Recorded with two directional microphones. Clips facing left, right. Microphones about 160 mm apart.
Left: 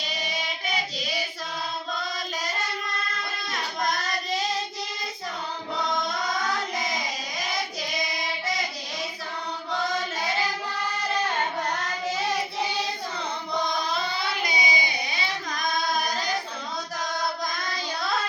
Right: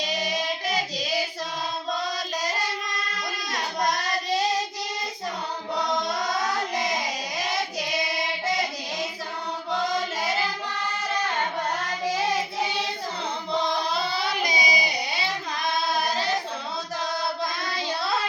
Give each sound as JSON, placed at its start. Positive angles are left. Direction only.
{"t": 3.5, "sound": "child singing", "side_deg": -35}
{"t": 13.5, "sound": "music", "side_deg": -35}
{"t": 15.5, "sound": "singing", "side_deg": -30}